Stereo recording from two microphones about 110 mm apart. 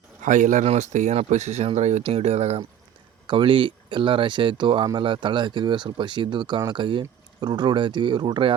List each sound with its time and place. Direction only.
0.6 s speech: 80° right
2.0 s speech: 65° right (ahead or behind)
3.2 s speech: 50° right (ahead or behind)